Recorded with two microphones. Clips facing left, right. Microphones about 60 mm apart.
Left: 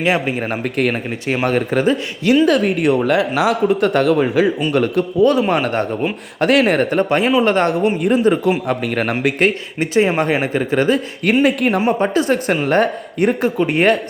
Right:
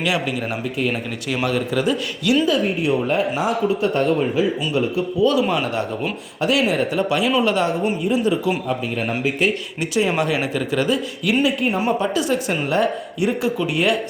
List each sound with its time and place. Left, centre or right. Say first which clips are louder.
0.0 s speech: left 4 dB; left
2.5 s speech: left 4 dB; left
3.7 s speech: left 4 dB; left
4.7 s a man's voice: left 4 dB; left
5.2 s speech: left 4 dB; left
8.6 s a man's voice: left 4 dB; left
9.9 s speech: left 4 dB; left
11.4 s a man's voice: left 5 dB; left
11.8 s speech: left 4 dB; left